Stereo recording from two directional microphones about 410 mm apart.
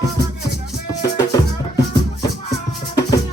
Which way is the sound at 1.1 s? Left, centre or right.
Centre.